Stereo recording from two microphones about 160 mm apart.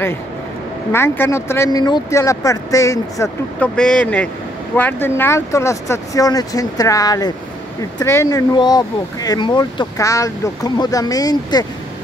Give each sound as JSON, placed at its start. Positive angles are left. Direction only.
{"t": 0.9, "sound": "speech", "side_deg": 15}
{"t": 3.5, "sound": "speech", "side_deg": 5}